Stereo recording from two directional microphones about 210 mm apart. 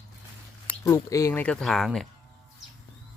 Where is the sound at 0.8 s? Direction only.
15° left (ahead or behind).